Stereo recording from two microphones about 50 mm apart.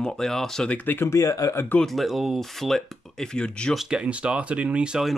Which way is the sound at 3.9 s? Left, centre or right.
Right.